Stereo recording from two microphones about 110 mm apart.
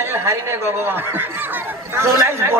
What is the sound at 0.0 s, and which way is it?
A man's voice, 25° right (ahead or behind).